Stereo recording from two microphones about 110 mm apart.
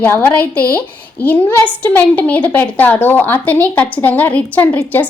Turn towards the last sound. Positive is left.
turn(degrees=15)  # may be behind; listen again after turning